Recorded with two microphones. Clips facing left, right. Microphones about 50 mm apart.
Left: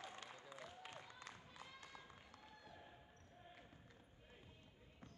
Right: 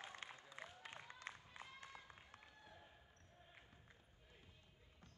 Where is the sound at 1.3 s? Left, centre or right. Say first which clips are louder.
Right 2 dB; right.